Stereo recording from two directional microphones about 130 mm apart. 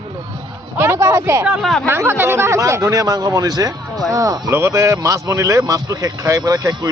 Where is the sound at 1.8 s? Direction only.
20° right (ahead or behind).